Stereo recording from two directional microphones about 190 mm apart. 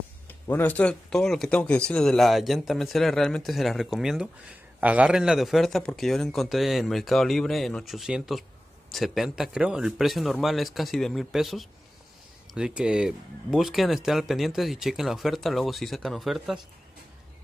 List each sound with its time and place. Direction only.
0.3 s speech: 10° left (ahead or behind)